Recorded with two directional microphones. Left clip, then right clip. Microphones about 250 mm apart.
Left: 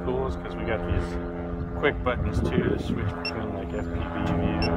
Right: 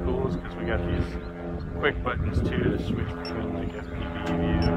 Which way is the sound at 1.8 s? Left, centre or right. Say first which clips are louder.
Left 1 dB; left.